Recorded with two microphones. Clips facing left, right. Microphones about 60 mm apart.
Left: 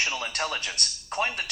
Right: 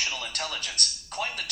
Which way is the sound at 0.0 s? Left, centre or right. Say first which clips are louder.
Left 4 dB; left.